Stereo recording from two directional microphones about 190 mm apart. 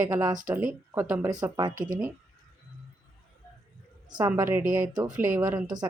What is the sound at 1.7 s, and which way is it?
Speech, 45° right (ahead or behind).